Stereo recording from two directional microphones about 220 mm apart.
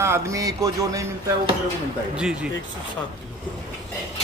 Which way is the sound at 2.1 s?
5° right (ahead or behind).